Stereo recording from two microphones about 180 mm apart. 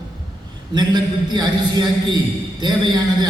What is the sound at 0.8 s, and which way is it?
A man's voice, 25° right (ahead or behind).